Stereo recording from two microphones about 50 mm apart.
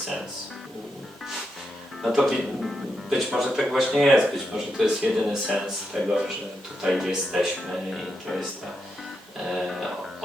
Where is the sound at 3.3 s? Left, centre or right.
Centre.